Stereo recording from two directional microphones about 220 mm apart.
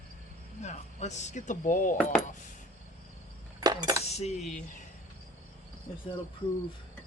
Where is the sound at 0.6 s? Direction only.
30° left (ahead or behind).